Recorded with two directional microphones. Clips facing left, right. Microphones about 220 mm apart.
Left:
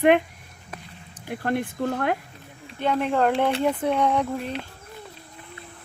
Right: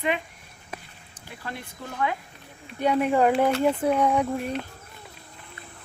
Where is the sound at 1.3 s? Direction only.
55° left (ahead or behind).